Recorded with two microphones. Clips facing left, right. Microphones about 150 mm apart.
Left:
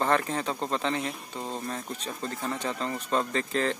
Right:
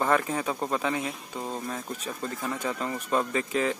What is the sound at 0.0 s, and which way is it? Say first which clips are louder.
Speech: right 1 dB; 10° right (ahead or behind).